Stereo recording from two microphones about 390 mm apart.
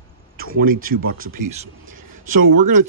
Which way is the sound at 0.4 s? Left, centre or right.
Right.